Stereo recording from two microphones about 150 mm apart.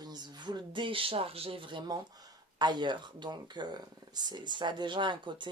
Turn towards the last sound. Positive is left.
turn(degrees=-30)  # may be behind; listen again after turning